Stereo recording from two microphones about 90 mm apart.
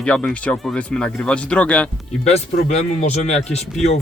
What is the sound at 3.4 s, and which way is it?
Speech, centre (ahead or behind).